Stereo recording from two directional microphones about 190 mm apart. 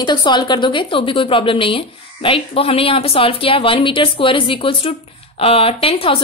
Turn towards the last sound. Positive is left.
turn(degrees=30)  # may be behind; listen again after turning